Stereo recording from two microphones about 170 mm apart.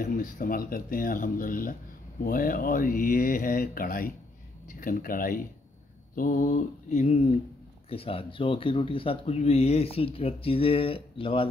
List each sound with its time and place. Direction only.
0.0 s speech: 55° left (ahead or behind)
6.1 s mantra: 50° left (ahead or behind)
7.9 s speech: 35° left (ahead or behind)